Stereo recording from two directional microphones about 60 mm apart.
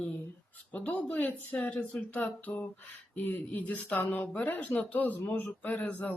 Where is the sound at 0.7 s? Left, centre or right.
Left.